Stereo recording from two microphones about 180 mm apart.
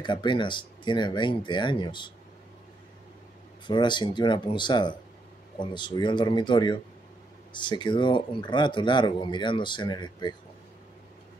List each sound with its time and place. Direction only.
0.0 s a man's voice: 25° left (ahead or behind)
3.6 s a man's voice: 25° left (ahead or behind)